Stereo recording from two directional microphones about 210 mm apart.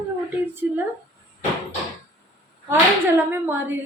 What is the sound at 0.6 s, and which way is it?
Speech, 10° right (ahead or behind).